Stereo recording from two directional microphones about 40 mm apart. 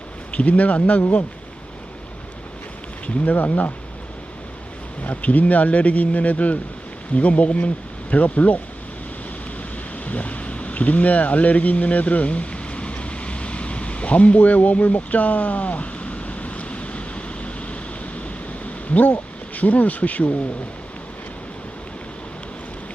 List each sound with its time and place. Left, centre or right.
0.3 s speech: left
3.2 s speech: left
5.0 s speech: left
10.1 s boat: left
18.6 s speech: left